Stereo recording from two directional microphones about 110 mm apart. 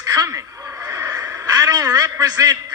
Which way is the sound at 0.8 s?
30° right (ahead or behind).